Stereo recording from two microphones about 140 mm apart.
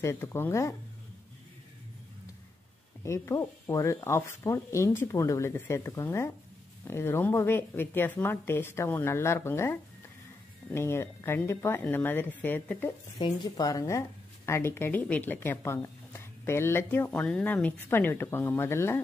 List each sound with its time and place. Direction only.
0.0 s speech: 20° left (ahead or behind)
3.0 s a woman's voice: 20° left (ahead or behind)
13.2 s a woman's voice: 25° left (ahead or behind)